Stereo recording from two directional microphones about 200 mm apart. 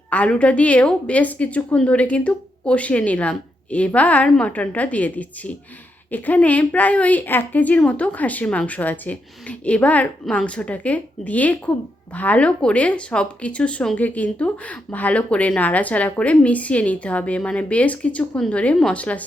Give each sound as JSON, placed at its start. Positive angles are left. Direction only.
{"t": 0.1, "sound": "speech", "side_deg": 5}